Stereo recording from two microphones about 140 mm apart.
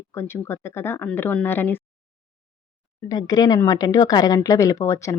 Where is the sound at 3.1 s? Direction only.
30° left (ahead or behind).